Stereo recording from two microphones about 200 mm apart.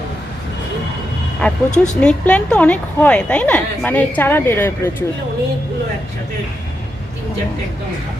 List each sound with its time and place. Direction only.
1.4 s a woman's voice: 5° left (ahead or behind)